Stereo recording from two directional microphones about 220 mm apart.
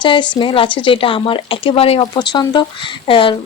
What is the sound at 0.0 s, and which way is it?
A woman's voice, 20° left (ahead or behind).